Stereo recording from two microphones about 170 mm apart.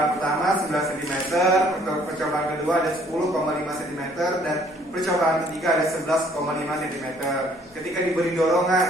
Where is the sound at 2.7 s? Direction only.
Centre (ahead or behind).